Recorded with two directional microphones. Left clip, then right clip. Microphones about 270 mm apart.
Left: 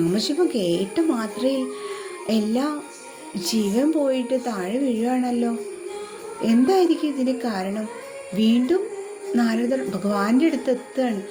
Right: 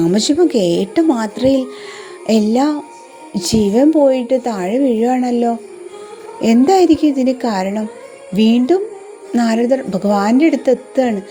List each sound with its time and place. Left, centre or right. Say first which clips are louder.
0.0 s a woman's voice: right 8 dB; right